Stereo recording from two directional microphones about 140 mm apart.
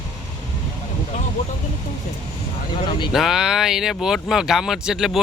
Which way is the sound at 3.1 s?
Centre (ahead or behind).